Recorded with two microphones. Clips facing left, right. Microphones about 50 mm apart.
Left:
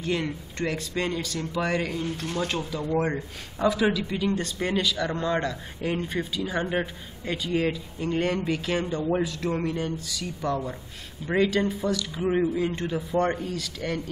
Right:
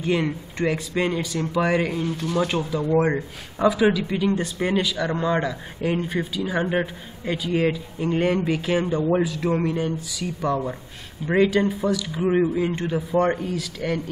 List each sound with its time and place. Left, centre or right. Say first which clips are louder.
0.0 s a man's voice: right 5 dB; centre